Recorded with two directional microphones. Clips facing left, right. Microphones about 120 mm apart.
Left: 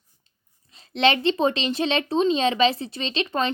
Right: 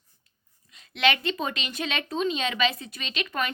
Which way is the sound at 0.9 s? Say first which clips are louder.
Left 5 dB; 30° left (ahead or behind).